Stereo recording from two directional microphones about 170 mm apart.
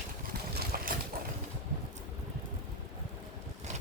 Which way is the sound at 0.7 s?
60° right (ahead or behind).